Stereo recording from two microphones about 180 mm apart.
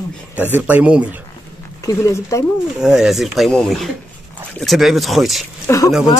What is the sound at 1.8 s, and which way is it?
Speech, 15° left (ahead or behind).